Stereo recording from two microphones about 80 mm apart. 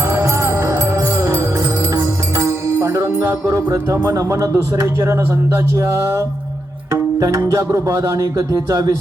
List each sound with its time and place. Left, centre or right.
0.0 s music: right
3.7 s speech: right